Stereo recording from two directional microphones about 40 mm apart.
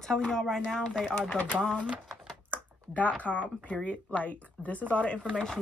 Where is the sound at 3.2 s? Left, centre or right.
Left.